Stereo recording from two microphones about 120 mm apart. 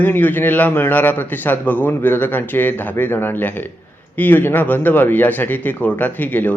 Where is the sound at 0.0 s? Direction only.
15° left (ahead or behind).